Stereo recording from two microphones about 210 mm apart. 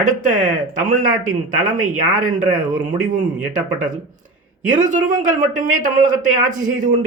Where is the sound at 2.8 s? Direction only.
40° right (ahead or behind).